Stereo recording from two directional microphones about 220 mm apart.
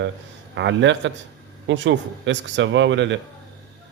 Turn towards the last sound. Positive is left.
turn(degrees=-55)  # may be behind; listen again after turning